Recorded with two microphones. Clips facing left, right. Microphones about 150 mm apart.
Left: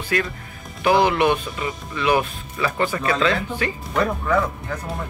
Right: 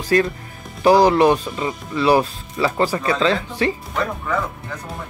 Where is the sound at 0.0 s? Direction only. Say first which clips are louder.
Right 6 dB; 35° right (ahead or behind).